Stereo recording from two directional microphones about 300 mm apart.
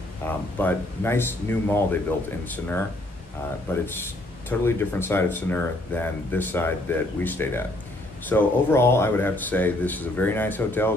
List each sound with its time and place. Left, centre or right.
0.2 s speech: centre
3.7 s speech: centre